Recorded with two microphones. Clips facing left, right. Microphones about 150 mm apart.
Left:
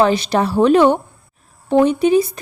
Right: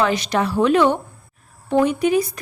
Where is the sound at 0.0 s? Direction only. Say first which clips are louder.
Left 4 dB; 30° left (ahead or behind).